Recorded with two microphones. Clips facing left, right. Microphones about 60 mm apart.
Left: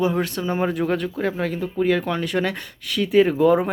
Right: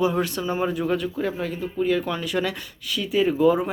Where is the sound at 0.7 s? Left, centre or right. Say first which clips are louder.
Left 2 dB; left.